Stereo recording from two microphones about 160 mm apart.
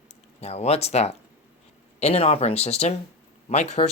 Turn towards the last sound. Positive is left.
turn(degrees=45)  # may be behind; listen again after turning